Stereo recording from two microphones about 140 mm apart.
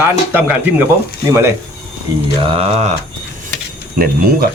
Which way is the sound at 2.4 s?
45° right (ahead or behind).